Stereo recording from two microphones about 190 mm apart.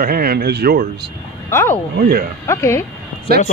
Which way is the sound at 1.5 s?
15° left (ahead or behind).